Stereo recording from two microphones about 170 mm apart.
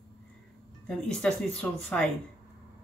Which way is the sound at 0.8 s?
5° left (ahead or behind).